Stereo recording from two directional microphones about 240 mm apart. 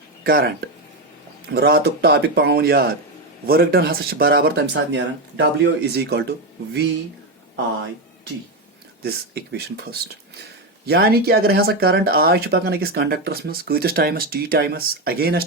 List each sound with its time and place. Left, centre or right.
0.3 s speech: right
1.5 s speech: right
9.0 s speech: right